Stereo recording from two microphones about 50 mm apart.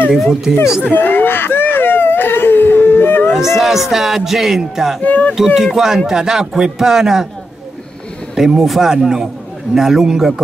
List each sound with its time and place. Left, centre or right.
0.2 s speech: centre
0.8 s a sound: left
3.3 s speech: centre
5.0 s speech: left
5.3 s speech: centre
8.4 s speech: centre